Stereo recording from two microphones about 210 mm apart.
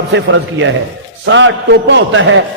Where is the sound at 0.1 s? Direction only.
60° right (ahead or behind).